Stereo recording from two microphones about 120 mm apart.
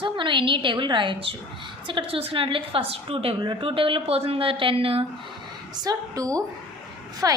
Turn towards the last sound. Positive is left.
turn(degrees=-30)  # may be behind; listen again after turning